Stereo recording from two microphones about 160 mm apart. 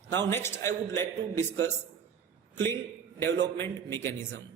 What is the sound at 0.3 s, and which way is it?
A man's voice, 15° left (ahead or behind).